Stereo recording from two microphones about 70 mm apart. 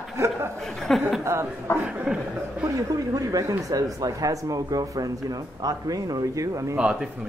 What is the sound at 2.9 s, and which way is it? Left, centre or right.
Speech, right.